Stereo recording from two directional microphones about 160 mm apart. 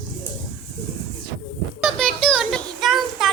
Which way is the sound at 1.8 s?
Centre (ahead or behind).